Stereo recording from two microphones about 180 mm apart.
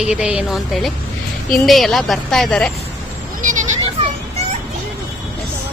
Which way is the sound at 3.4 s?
45° right (ahead or behind).